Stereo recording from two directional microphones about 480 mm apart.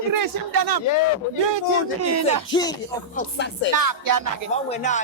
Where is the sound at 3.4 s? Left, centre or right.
Left.